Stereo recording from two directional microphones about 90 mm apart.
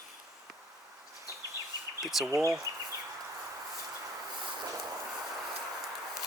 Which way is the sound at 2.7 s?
45° right (ahead or behind).